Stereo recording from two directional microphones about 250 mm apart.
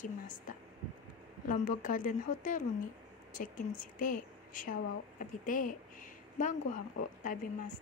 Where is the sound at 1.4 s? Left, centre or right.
Left.